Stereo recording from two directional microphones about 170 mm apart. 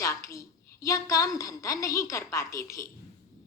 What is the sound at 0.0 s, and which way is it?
A woman's voice, 20° left (ahead or behind).